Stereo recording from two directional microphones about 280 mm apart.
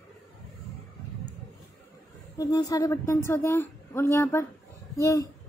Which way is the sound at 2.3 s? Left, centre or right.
Centre.